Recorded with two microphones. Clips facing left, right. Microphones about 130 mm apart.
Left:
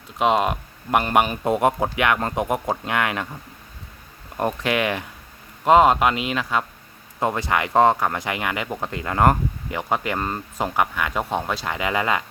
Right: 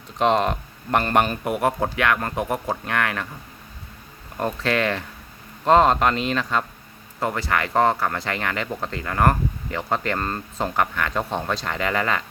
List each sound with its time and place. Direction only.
0.2 s speech: 10° left (ahead or behind)
1.5 s speech: 20° left (ahead or behind)
4.4 s speech: 15° left (ahead or behind)
7.2 s speech: 20° left (ahead or behind)